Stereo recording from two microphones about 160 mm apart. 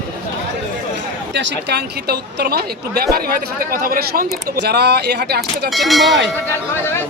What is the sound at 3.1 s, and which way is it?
Speech, 70° right (ahead or behind).